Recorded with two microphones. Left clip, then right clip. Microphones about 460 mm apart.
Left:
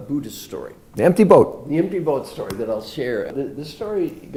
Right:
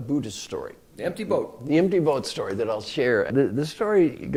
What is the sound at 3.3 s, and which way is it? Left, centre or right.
Speech, right.